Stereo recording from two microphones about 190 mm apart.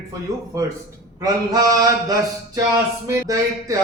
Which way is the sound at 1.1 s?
20° right (ahead or behind).